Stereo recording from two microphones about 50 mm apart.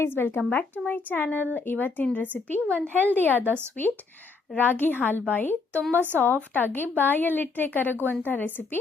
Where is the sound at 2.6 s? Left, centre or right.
Right.